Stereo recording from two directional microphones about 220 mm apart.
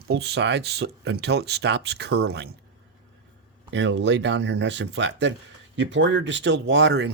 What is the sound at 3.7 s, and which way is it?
Speech, 55° right (ahead or behind).